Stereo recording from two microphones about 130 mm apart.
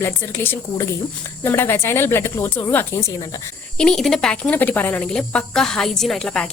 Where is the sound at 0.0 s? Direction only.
20° left (ahead or behind).